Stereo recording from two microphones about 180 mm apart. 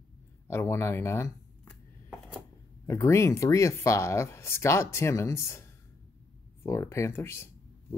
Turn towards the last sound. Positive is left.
turn(degrees=15)  # may be behind; listen again after turning